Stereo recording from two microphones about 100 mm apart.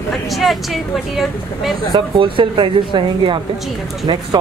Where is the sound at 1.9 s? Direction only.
60° right (ahead or behind).